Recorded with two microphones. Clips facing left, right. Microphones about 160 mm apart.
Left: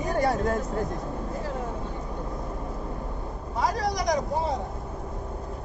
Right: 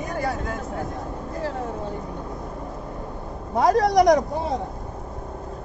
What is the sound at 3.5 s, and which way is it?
Speech, 55° right (ahead or behind).